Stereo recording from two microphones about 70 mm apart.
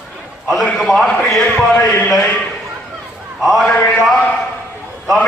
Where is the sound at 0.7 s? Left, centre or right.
Centre.